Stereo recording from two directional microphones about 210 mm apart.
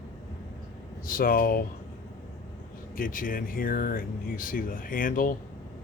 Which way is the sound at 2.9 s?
40° left (ahead or behind).